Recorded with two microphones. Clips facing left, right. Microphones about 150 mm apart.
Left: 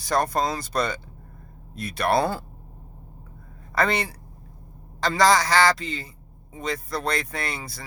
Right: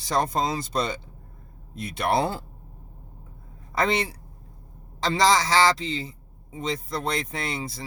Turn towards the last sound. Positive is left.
turn(degrees=-25)  # may be behind; listen again after turning